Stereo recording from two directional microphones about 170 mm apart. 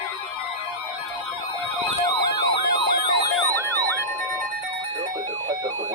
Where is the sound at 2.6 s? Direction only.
65° left (ahead or behind).